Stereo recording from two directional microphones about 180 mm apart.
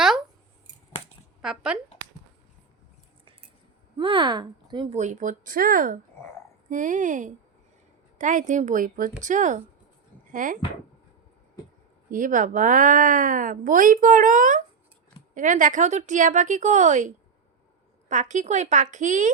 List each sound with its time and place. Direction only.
1.4 s speech: 5° right (ahead or behind)
3.9 s speech: 25° right (ahead or behind)
4.9 s speech: 40° right (ahead or behind)
12.1 s speech: 45° right (ahead or behind)
18.1 s speech: 40° right (ahead or behind)